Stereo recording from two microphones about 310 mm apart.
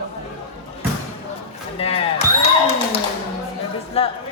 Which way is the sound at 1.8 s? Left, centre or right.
Centre.